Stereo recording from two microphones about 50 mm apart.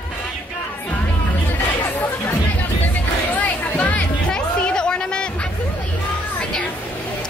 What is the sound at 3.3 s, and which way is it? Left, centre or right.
Music, left.